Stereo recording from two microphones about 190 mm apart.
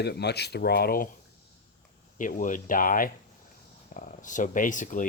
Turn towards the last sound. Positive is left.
turn(degrees=45)  # may be behind; listen again after turning